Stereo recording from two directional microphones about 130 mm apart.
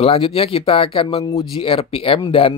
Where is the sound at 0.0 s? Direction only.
45° left (ahead or behind).